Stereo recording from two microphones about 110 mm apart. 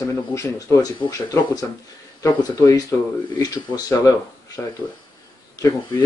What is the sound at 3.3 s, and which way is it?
Speech, 35° left (ahead or behind).